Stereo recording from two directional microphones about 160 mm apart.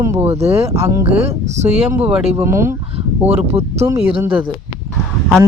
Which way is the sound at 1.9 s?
10° right (ahead or behind).